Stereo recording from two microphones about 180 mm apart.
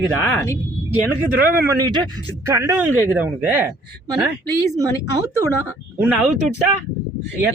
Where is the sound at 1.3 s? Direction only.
10° right (ahead or behind).